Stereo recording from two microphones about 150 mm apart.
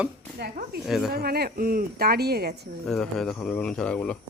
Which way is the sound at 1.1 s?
90° right.